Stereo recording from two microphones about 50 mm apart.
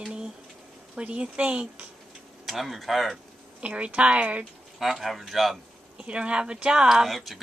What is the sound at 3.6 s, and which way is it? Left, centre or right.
Speech, right.